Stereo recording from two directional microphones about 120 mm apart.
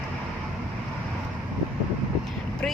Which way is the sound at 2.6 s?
10° left (ahead or behind).